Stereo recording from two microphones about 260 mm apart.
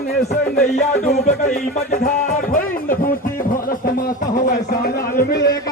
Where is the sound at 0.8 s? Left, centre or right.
Left.